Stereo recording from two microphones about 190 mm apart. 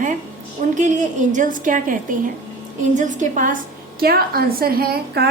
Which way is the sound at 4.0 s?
50° right (ahead or behind).